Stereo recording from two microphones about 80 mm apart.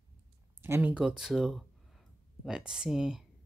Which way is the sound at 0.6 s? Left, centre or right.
Right.